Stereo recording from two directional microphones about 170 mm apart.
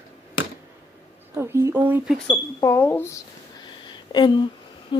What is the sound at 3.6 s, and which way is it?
Wheeze, 25° left (ahead or behind).